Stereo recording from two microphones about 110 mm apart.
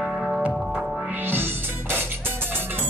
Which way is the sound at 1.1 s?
20° right (ahead or behind).